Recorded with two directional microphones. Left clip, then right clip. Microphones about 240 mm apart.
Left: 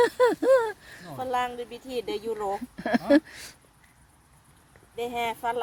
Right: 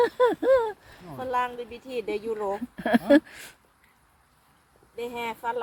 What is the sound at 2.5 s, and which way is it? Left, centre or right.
Speech, centre.